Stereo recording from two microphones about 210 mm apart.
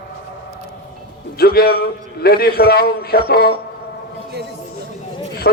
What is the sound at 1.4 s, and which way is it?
A man's voice, 45° left (ahead or behind).